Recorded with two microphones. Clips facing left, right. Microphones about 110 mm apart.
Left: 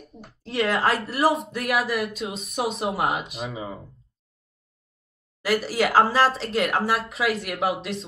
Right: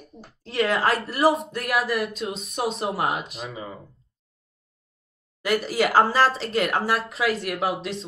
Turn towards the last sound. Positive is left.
turn(degrees=0)  # may be behind; listen again after turning